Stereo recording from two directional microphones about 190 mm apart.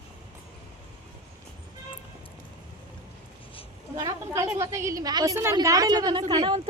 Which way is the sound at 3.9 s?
15° right (ahead or behind).